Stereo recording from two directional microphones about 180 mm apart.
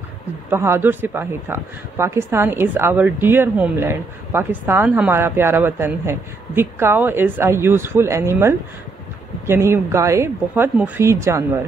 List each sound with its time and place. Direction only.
0.5 s speech: 15° right (ahead or behind)